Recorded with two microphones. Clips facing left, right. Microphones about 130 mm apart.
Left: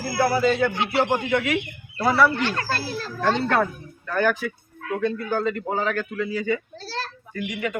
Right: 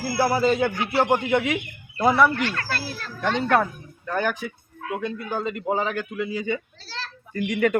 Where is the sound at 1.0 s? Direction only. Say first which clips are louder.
Right 2 dB; 20° right (ahead or behind).